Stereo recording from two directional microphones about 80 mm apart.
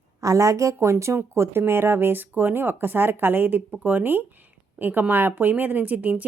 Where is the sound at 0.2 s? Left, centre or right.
Right.